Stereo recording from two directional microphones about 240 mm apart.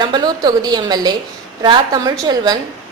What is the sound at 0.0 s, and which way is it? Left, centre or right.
A woman's voice, centre.